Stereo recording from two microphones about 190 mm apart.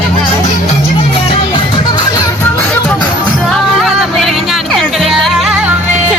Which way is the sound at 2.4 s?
10° left (ahead or behind).